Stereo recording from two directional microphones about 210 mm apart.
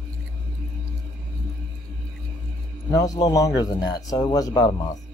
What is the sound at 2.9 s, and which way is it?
Speech, 15° left (ahead or behind).